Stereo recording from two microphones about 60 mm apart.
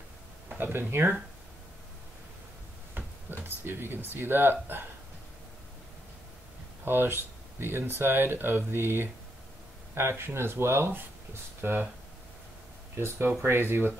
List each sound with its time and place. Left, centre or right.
0.6 s speech: right
2.9 s a sound: right
6.8 s speech: right
12.9 s speech: right